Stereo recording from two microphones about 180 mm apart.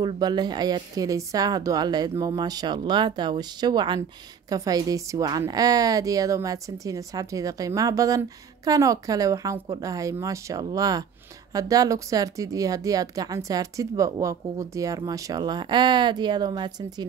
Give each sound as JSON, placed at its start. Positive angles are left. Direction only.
{"t": 0.0, "sound": "a woman's voice", "side_deg": -25}